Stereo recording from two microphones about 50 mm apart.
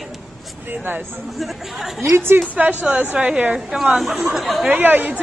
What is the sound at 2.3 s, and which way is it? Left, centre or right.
Speech, right.